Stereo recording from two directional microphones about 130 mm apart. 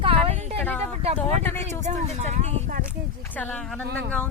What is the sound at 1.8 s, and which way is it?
Speech, 60° right (ahead or behind).